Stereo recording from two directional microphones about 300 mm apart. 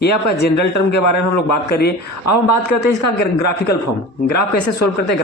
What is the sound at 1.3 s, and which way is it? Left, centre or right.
Speech, left.